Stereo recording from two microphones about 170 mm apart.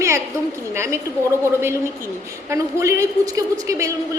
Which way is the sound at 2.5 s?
20° right (ahead or behind).